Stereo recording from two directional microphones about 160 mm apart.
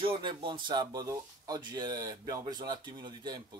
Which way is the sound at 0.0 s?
30° right (ahead or behind).